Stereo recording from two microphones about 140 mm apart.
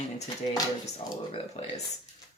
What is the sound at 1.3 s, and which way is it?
Speech, 45° left (ahead or behind).